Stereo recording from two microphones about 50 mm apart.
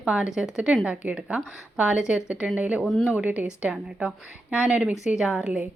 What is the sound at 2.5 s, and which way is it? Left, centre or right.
A woman's voice, right.